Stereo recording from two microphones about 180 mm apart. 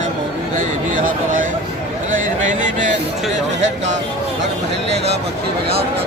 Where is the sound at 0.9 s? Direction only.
50° right (ahead or behind).